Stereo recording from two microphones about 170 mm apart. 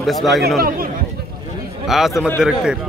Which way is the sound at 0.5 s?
60° right (ahead or behind).